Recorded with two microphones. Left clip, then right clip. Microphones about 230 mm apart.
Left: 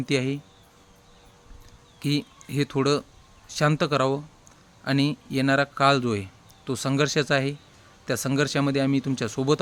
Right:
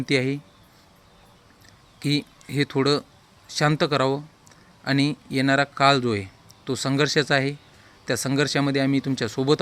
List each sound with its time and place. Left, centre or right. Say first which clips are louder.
0.0 s a man's voice: right 3 dB; centre
2.0 s a man's voice: right 2 dB; centre